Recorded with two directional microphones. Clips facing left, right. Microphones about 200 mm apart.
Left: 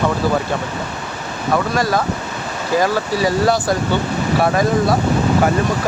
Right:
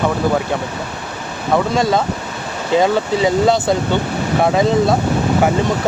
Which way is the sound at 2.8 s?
20° right (ahead or behind).